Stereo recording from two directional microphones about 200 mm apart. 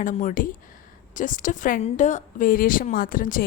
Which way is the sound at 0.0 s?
40° left (ahead or behind).